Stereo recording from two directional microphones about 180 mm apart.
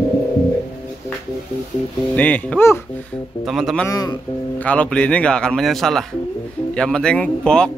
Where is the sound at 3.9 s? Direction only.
20° left (ahead or behind).